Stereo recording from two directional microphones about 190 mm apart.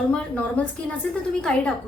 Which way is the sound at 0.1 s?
5° left (ahead or behind).